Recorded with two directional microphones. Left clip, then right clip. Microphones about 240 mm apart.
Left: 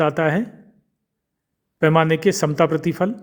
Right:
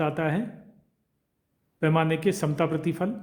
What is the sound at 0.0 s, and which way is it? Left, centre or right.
Speech, left.